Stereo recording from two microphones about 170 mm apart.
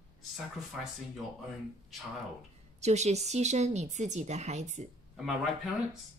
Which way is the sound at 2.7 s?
40° right (ahead or behind).